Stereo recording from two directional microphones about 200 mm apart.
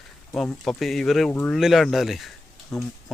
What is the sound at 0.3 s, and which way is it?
Speech, 5° left (ahead or behind).